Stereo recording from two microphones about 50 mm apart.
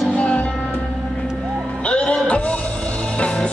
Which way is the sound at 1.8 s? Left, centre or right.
Left.